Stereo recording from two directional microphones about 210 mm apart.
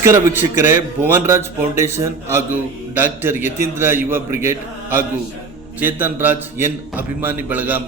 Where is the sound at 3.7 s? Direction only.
10° right (ahead or behind).